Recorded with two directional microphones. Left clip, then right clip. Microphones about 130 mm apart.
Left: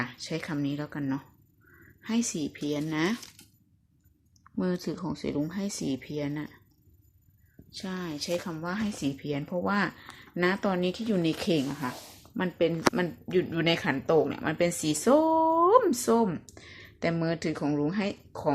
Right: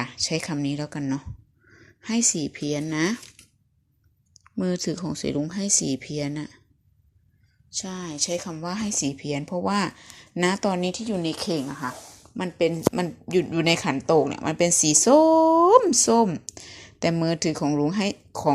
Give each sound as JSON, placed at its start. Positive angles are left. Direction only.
{"t": 0.0, "sound": "speech", "side_deg": -30}
{"t": 4.6, "sound": "speech", "side_deg": -35}
{"t": 7.8, "sound": "speech", "side_deg": -10}
{"t": 8.6, "sound": "speech", "side_deg": -25}
{"t": 10.7, "sound": "speech", "side_deg": -20}
{"t": 11.0, "sound": "a woman's voice", "side_deg": 5}
{"t": 11.5, "sound": "speech", "side_deg": 15}
{"t": 12.4, "sound": "speech", "side_deg": -20}